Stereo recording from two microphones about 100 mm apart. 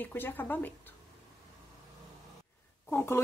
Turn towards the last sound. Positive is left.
turn(degrees=25)  # may be behind; listen again after turning